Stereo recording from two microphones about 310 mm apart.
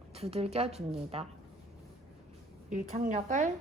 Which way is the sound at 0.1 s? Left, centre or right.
Centre.